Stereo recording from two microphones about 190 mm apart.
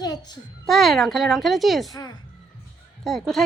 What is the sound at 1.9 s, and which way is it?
Child singing, 20° left (ahead or behind).